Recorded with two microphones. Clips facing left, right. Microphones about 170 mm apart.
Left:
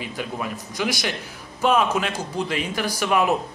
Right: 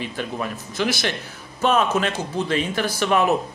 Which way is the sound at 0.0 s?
15° left (ahead or behind).